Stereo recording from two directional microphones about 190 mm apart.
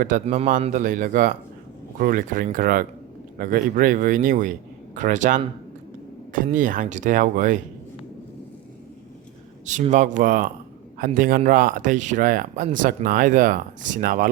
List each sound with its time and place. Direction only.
0.0 s speech: 40° right (ahead or behind)
9.6 s speech: 40° right (ahead or behind)